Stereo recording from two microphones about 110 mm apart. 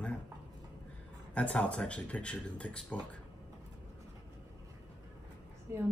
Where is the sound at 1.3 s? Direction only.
10° left (ahead or behind).